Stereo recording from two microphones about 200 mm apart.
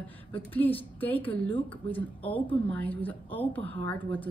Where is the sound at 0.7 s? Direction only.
25° left (ahead or behind).